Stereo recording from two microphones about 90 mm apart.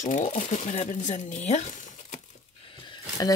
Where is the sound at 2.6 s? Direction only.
65° left (ahead or behind).